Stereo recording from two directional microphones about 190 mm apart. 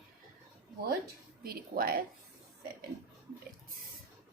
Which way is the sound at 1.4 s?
50° right (ahead or behind).